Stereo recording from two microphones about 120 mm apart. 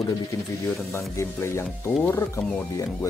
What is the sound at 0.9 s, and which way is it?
Speech, 25° left (ahead or behind).